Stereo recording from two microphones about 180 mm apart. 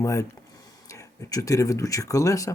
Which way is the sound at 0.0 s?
15° left (ahead or behind).